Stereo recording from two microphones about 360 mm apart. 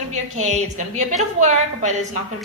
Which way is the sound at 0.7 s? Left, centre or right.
Centre.